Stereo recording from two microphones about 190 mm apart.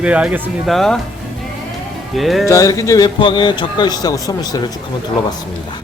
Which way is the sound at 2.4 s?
15° left (ahead or behind).